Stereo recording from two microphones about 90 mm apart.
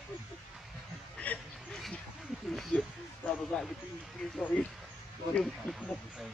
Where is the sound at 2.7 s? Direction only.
20° left (ahead or behind).